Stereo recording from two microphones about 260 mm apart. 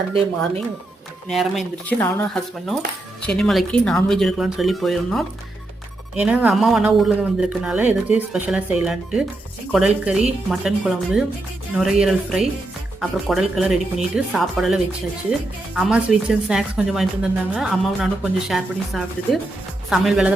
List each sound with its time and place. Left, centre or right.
0.1 s speech: right
1.3 s speech: centre